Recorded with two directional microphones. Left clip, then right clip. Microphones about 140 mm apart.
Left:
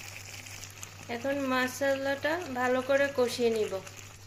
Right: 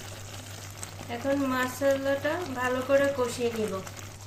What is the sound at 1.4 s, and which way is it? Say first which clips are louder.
Frying: right 1 dB; 55° left (ahead or behind).